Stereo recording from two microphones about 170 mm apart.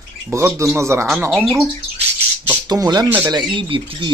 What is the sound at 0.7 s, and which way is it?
Speech, 15° right (ahead or behind).